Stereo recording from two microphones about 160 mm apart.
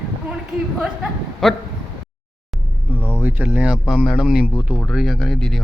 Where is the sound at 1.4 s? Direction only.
Centre (ahead or behind).